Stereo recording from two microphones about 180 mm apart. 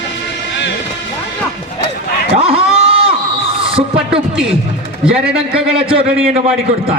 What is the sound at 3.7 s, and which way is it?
Speech, 30° right (ahead or behind).